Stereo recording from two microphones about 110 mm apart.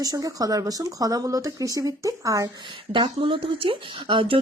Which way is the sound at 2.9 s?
50° right (ahead or behind).